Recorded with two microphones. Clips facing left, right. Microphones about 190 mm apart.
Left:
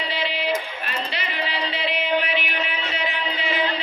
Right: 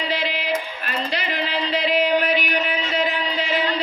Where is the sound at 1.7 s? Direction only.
40° right (ahead or behind).